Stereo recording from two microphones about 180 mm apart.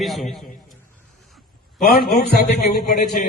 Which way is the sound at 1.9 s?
60° left (ahead or behind).